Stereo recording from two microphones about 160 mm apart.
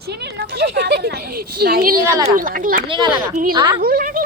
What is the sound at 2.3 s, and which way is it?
Speech, 60° right (ahead or behind).